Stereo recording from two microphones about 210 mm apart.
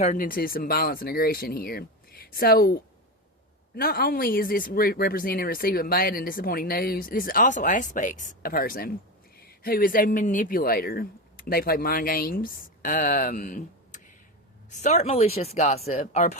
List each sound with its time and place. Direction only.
0.0 s speech: 40° left (ahead or behind)
3.8 s speech: 45° left (ahead or behind)